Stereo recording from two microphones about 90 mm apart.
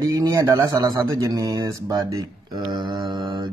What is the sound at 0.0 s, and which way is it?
Speech, 35° right (ahead or behind).